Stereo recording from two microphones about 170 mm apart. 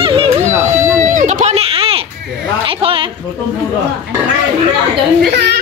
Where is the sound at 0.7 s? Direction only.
45° right (ahead or behind).